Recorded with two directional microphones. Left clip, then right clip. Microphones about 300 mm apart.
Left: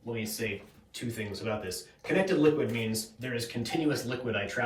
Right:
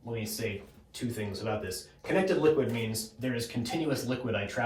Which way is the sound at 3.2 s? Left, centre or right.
Centre.